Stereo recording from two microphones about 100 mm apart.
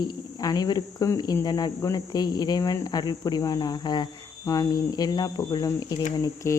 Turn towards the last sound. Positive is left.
turn(degrees=30)  # may be behind; listen again after turning